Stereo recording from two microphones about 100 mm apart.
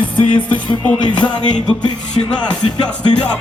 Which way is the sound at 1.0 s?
50° left (ahead or behind).